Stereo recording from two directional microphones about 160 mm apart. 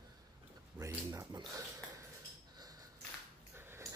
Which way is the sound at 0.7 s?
15° right (ahead or behind).